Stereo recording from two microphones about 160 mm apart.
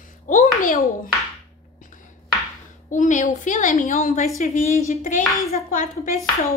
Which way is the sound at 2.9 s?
50° left (ahead or behind).